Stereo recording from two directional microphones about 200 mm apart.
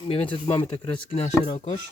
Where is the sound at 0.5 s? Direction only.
25° left (ahead or behind).